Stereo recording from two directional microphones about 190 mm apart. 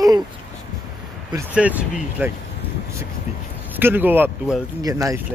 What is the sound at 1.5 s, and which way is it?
Speech, 5° right (ahead or behind).